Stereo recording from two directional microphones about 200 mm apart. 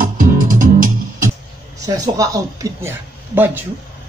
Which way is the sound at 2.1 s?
15° right (ahead or behind).